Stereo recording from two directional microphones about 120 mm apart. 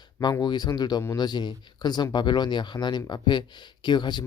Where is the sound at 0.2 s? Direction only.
35° left (ahead or behind).